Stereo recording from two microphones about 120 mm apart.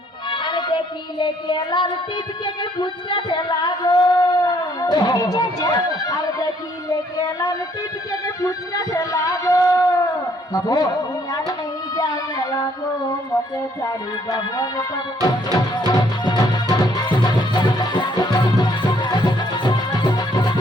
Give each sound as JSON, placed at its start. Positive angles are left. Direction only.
{"t": 0.3, "sound": "music", "side_deg": 40}
{"t": 2.4, "sound": "speech", "side_deg": 40}
{"t": 10.5, "sound": "music", "side_deg": 30}
{"t": 11.9, "sound": "a sound", "side_deg": 30}
{"t": 13.8, "sound": "music", "side_deg": 30}